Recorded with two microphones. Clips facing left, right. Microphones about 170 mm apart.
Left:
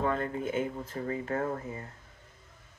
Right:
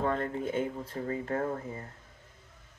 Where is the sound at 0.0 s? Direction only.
35° right (ahead or behind).